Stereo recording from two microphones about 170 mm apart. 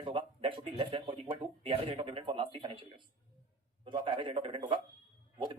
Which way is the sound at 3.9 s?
30° right (ahead or behind).